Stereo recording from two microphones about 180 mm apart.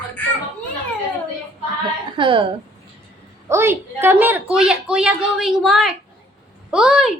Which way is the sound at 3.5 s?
15° right (ahead or behind).